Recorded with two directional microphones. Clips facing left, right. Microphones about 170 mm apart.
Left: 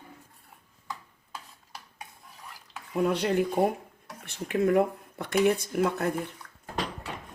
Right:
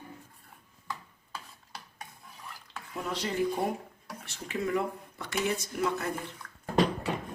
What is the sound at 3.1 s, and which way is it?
Speech, 60° left (ahead or behind).